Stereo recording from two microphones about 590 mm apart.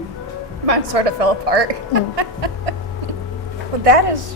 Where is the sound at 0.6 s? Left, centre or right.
Right.